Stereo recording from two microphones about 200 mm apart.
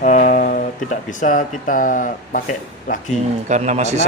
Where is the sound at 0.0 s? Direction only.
40° left (ahead or behind).